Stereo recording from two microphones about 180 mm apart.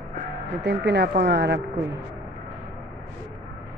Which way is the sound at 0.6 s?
70° right (ahead or behind).